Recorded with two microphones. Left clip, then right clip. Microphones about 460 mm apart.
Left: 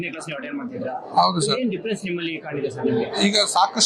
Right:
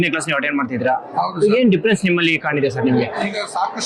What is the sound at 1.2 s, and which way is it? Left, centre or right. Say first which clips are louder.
Speech: left 2 dB; left.